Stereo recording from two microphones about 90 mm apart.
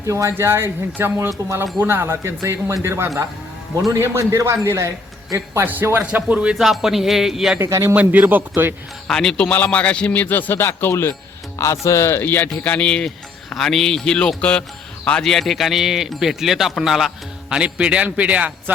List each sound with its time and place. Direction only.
0.0 s speech: 35° right (ahead or behind)
5.6 s a man's voice: 20° right (ahead or behind)
6.6 s speech: 5° right (ahead or behind)
7.6 s speech: 30° right (ahead or behind)
7.9 s speech: 20° right (ahead or behind)
9.0 s a man's voice: 10° left (ahead or behind); by 18.5 s 15° right (ahead or behind)